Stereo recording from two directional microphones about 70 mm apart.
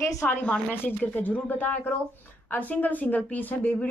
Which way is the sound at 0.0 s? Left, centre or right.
Left.